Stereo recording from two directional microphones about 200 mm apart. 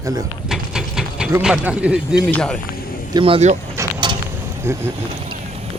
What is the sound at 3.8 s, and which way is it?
Vehicle, 25° right (ahead or behind).